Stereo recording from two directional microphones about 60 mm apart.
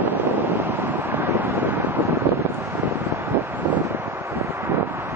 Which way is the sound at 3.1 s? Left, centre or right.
Right.